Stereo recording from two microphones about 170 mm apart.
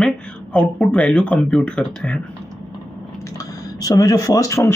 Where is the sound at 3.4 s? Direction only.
20° left (ahead or behind).